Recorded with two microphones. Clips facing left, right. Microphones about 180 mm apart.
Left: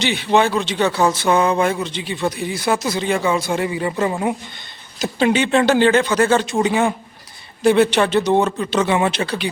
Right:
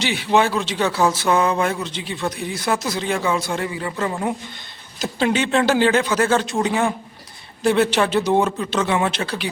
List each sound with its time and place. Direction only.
0.0 s speech: 5° right (ahead or behind)
3.7 s speech: 20° left (ahead or behind)
4.9 s speech: centre (ahead or behind)